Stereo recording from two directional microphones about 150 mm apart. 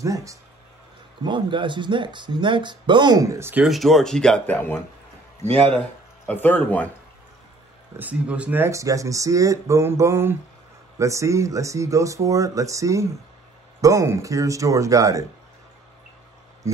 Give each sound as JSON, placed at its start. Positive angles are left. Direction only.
{"t": 0.0, "sound": "speech", "side_deg": -20}
{"t": 1.2, "sound": "speech", "side_deg": -30}
{"t": 3.6, "sound": "speech", "side_deg": 0}
{"t": 6.2, "sound": "speech", "side_deg": 10}
{"t": 8.0, "sound": "speech", "side_deg": -10}
{"t": 16.6, "sound": "speech", "side_deg": -20}